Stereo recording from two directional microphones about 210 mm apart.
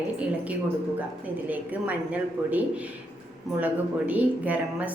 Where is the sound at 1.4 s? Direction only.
5° right (ahead or behind).